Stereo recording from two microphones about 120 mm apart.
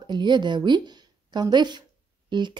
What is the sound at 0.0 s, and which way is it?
A woman's voice, 40° right (ahead or behind).